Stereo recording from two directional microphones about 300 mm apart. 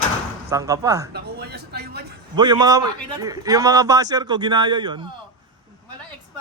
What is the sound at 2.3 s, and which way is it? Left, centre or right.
A man's voice, centre.